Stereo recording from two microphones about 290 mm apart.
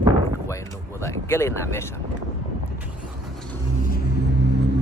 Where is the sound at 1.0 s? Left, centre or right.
Centre.